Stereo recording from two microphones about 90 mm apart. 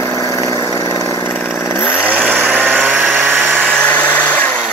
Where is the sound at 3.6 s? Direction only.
10° left (ahead or behind).